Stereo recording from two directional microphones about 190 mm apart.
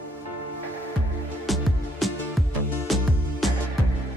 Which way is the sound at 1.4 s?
Centre (ahead or behind).